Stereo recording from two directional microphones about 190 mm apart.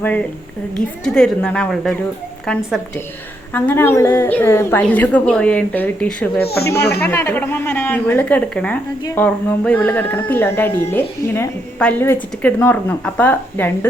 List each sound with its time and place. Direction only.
1.0 s speech: 5° left (ahead or behind)
3.5 s a woman's voice: 10° left (ahead or behind)
6.4 s speech: 55° left (ahead or behind)
7.0 s a woman's voice: 15° left (ahead or behind)